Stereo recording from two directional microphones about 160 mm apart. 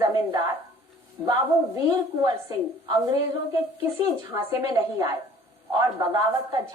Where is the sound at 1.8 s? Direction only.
25° right (ahead or behind).